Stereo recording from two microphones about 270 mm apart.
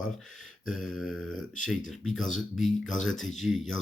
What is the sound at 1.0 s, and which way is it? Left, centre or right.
Speech, centre.